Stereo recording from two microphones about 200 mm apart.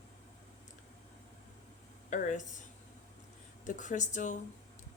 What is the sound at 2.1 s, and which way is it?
Speech, 40° left (ahead or behind).